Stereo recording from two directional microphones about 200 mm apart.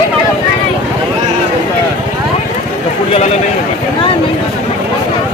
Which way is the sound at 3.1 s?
35° left (ahead or behind).